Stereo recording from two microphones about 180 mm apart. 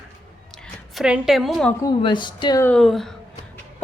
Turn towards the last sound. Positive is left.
turn(degrees=0)  # may be behind; listen again after turning